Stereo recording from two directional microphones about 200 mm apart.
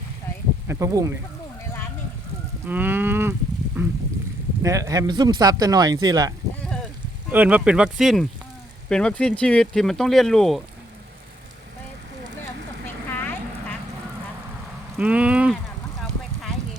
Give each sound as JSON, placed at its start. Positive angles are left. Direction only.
{"t": 0.7, "sound": "cattle", "side_deg": -15}
{"t": 2.6, "sound": "cattle", "side_deg": -10}
{"t": 4.6, "sound": "speech", "side_deg": -15}
{"t": 7.3, "sound": "speech", "side_deg": -10}
{"t": 12.4, "sound": "clip-clop", "side_deg": 10}
{"t": 14.9, "sound": "a sound", "side_deg": -5}